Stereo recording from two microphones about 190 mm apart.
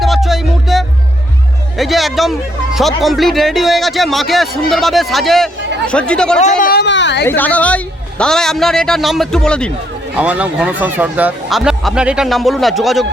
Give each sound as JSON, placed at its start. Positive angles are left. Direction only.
{"t": 0.0, "sound": "music", "side_deg": 0}
{"t": 1.8, "sound": "speech", "side_deg": 0}
{"t": 6.6, "sound": "speech", "side_deg": 55}
{"t": 7.3, "sound": "a woman's voice", "side_deg": 10}
{"t": 10.2, "sound": "speech", "side_deg": -5}